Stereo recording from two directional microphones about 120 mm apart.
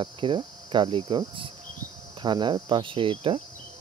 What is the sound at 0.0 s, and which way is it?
Cricket, 40° right (ahead or behind).